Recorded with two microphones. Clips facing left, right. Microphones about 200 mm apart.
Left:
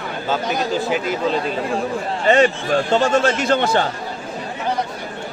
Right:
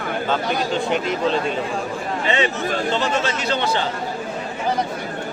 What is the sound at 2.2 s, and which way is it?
A man's voice, 45° left (ahead or behind).